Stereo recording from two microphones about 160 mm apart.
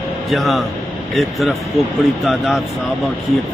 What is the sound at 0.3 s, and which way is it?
Speech, centre (ahead or behind).